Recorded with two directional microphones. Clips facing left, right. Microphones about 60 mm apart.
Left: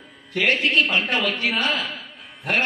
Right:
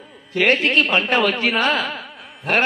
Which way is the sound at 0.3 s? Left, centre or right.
Right.